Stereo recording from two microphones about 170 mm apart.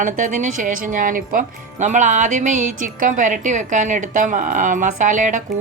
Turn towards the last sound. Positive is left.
turn(degrees=-50)  # may be behind; listen again after turning